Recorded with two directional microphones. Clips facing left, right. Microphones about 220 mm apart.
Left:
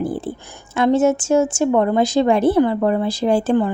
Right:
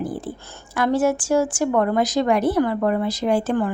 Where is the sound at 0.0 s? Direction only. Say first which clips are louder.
Left 4 dB; 30° left (ahead or behind).